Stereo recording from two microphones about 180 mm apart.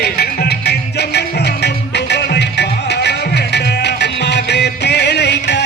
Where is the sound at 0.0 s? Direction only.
60° left (ahead or behind).